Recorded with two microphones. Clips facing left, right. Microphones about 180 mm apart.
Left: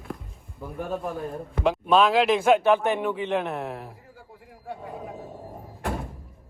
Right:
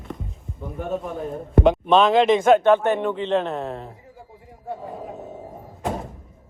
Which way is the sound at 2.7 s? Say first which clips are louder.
Right 4 dB; 10° left (ahead or behind).